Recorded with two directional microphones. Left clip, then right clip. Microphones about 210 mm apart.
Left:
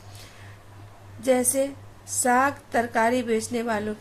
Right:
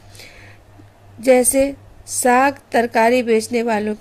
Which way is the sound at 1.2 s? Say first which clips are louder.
Right 9 dB; 35° right (ahead or behind).